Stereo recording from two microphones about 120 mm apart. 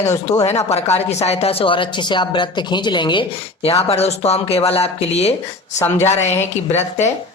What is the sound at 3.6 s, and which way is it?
Speech, 60° left (ahead or behind).